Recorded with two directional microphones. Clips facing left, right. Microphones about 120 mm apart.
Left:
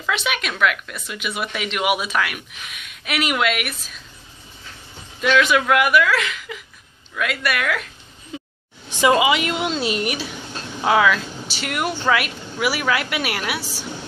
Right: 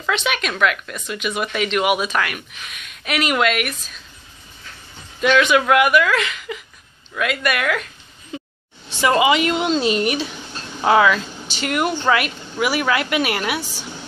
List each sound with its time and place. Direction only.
0.1 s speech: 5° left (ahead or behind)
5.2 s speech: centre (ahead or behind)
8.8 s a sound: 15° left (ahead or behind)
9.2 s speech: 5° left (ahead or behind)